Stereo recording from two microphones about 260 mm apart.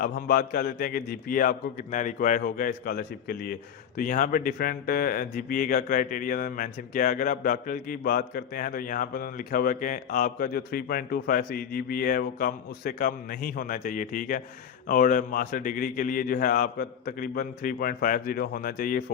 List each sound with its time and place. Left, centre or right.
0.0 s a man's voice: left